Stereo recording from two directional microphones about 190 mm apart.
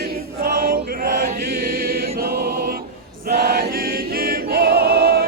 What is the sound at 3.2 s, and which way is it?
Choir, 55° right (ahead or behind).